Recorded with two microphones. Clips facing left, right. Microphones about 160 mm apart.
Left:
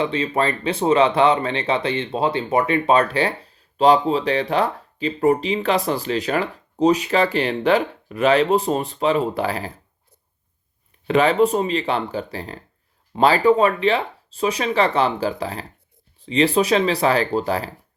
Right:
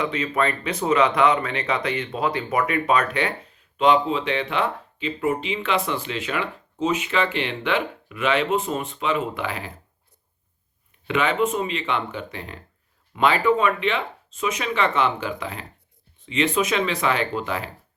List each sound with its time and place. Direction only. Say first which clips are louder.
0.0 s speech: left 3 dB; 30° left (ahead or behind)
11.0 s speech: left 6 dB; 35° left (ahead or behind)